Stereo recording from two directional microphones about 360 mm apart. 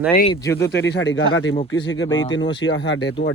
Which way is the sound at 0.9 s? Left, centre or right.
Left.